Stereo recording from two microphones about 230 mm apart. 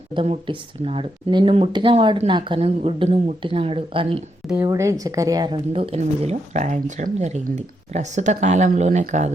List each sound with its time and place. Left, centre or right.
0.1 s a woman's voice: right
4.4 s a woman's voice: centre; by 9.3 s right